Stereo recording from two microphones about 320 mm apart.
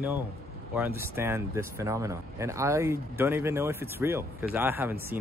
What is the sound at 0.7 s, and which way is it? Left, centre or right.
Speech, centre.